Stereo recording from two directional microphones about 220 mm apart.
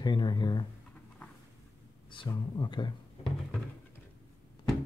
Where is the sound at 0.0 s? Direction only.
20° left (ahead or behind).